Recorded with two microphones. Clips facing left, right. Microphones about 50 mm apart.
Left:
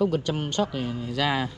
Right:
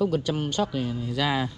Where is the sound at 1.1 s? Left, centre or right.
Left.